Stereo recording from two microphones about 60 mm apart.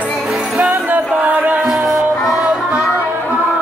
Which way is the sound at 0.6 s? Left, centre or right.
Right.